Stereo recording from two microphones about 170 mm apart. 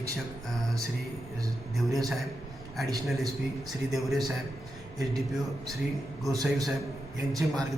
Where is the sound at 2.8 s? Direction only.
Centre (ahead or behind).